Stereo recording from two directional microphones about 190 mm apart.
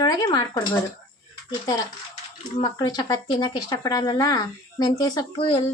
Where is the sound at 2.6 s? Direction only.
20° left (ahead or behind).